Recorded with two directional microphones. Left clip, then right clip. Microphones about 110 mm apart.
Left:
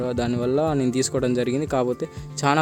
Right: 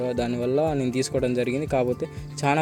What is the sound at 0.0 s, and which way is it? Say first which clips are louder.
Speech: left 1 dB; 30° left (ahead or behind).